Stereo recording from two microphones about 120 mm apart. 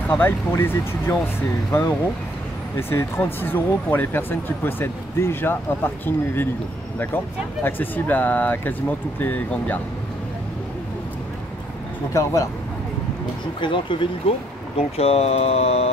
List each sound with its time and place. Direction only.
0.1 s speech: 15° left (ahead or behind)
7.6 s speech: 15° left (ahead or behind)
12.1 s speech: 25° left (ahead or behind)
13.6 s speech: 45° left (ahead or behind)
14.8 s speech: 60° left (ahead or behind)